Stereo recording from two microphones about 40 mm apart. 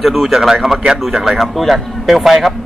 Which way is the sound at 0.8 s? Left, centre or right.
Centre.